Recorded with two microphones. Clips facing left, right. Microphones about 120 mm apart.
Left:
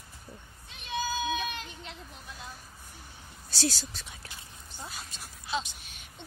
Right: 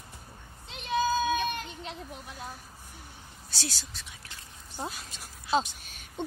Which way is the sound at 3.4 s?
35° left (ahead or behind).